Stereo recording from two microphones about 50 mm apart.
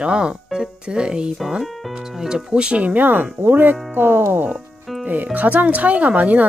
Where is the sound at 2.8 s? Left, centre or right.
Right.